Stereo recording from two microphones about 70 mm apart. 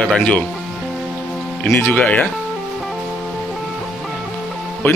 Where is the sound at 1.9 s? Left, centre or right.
Centre.